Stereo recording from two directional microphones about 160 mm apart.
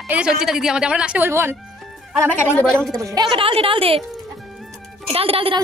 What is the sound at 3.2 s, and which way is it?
Speech, 35° right (ahead or behind).